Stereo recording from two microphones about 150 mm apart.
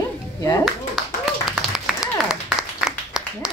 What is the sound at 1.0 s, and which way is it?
Clapping, centre (ahead or behind).